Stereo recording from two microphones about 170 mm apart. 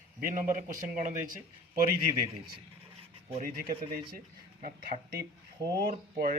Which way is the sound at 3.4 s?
60° right (ahead or behind).